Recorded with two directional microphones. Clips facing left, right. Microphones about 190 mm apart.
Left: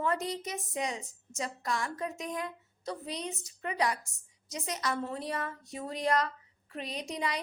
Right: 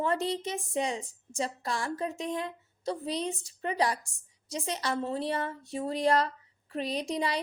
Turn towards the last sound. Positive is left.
turn(degrees=-30)  # may be behind; listen again after turning